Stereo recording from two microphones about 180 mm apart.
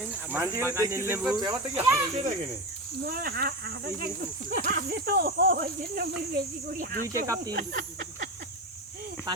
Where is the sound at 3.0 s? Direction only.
55° right (ahead or behind).